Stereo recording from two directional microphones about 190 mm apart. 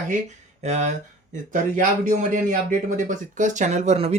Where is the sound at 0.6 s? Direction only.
40° right (ahead or behind).